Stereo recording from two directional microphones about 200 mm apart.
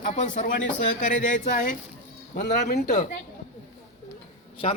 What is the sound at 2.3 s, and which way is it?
Speech, 45° left (ahead or behind).